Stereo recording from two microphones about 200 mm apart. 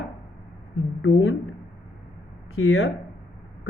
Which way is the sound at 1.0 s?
90° left.